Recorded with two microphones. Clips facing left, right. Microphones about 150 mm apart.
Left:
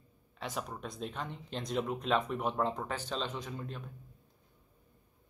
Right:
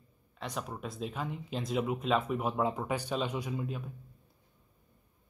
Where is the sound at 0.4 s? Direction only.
Centre (ahead or behind).